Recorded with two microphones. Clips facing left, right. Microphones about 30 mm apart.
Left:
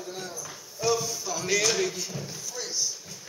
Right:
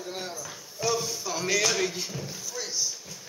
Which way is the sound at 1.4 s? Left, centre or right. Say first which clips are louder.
Even; centre.